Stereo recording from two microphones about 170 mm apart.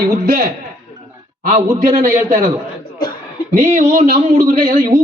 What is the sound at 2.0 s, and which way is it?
Speech, 50° right (ahead or behind).